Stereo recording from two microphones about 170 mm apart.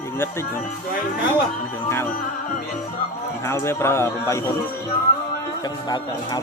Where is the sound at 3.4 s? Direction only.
15° left (ahead or behind).